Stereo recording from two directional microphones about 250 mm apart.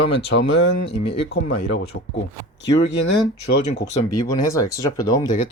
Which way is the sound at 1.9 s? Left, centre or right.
Left.